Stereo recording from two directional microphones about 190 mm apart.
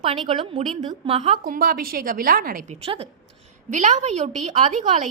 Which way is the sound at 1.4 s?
50° right (ahead or behind).